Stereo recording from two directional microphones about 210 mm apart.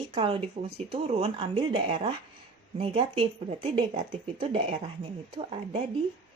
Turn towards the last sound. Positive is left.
turn(degrees=-25)  # may be behind; listen again after turning